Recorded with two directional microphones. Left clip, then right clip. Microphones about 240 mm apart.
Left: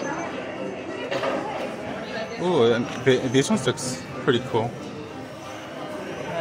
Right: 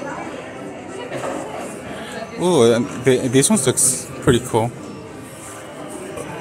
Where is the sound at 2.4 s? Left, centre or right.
Right.